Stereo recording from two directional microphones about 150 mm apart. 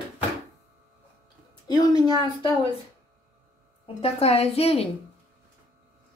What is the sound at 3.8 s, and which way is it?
Speech, 40° left (ahead or behind).